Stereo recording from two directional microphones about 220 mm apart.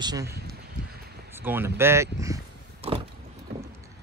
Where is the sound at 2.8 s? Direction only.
25° right (ahead or behind).